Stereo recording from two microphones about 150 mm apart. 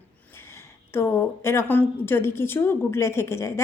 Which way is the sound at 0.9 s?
15° left (ahead or behind).